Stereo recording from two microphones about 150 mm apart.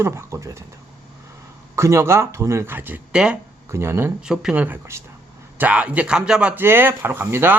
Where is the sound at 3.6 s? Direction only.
15° right (ahead or behind).